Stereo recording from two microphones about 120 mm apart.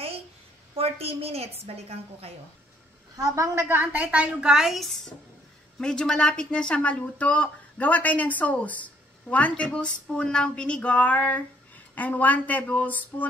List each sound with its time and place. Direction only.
0.7 s a woman's voice: 55° right (ahead or behind)
3.2 s a woman's voice: 25° right (ahead or behind); by 13.3 s 15° left (ahead or behind)